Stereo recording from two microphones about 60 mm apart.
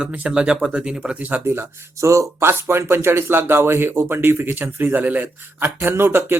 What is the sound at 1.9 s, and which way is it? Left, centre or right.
A man's voice, right.